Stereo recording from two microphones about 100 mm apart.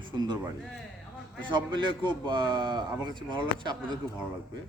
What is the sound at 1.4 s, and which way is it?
A man's voice, 50° right (ahead or behind).